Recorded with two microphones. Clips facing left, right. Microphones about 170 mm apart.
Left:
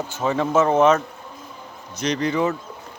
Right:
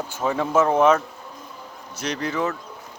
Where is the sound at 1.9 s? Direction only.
5° right (ahead or behind).